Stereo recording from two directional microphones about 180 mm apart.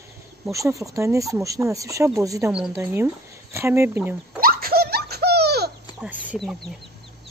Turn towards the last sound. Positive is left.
turn(degrees=-5)  # may be behind; listen again after turning